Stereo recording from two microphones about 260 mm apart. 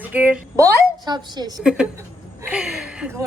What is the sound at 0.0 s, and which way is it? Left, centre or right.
A woman's voice, centre.